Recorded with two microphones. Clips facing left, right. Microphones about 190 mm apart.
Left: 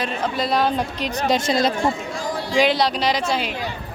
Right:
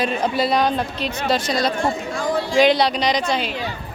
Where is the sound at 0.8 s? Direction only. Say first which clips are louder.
Even; 15° left (ahead or behind).